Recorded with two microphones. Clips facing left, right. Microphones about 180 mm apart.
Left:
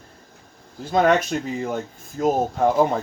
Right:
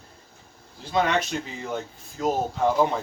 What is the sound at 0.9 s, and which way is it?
Speech, 50° left (ahead or behind).